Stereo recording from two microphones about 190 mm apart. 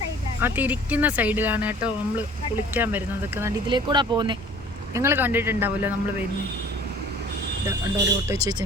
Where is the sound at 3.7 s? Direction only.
25° right (ahead or behind).